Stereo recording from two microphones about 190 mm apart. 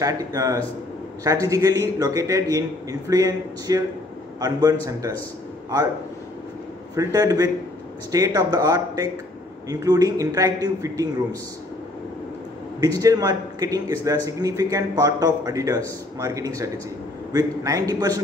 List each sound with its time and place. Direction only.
0.0 s a man's voice: 20° right (ahead or behind)
7.0 s a man's voice: 20° right (ahead or behind)
12.8 s a man's voice: 20° right (ahead or behind)